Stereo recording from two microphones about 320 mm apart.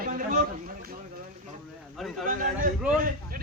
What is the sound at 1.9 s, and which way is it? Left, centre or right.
Speech, centre.